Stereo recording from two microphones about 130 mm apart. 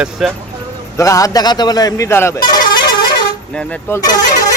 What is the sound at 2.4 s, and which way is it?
Vehicle horn, 35° left (ahead or behind).